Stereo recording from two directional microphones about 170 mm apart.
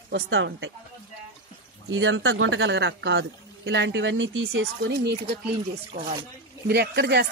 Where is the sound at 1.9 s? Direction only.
90° right.